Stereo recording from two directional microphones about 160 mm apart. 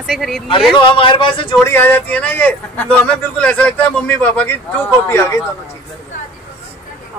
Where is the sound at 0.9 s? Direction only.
30° left (ahead or behind).